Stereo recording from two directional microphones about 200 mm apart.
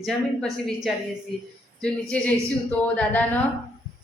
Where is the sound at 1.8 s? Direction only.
5° left (ahead or behind).